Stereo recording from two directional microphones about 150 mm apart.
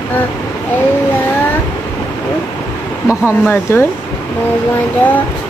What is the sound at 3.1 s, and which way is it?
Speech, 15° left (ahead or behind).